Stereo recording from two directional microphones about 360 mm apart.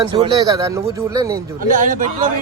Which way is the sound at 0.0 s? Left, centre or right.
Centre.